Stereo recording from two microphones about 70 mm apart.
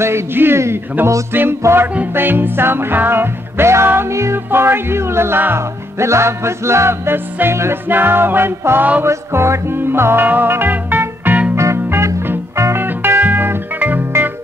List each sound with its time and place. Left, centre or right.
0.0 s music: right
2.1 s music: right
9.0 s music: right
11.5 s music: right